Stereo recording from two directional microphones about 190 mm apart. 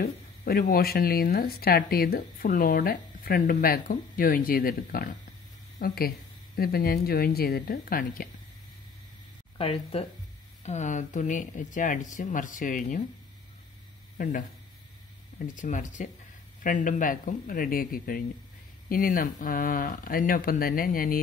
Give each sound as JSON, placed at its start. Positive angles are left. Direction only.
{"t": 0.0, "sound": "speech", "side_deg": 55}
{"t": 9.6, "sound": "speech", "side_deg": 30}
{"t": 14.1, "sound": "speech", "side_deg": 45}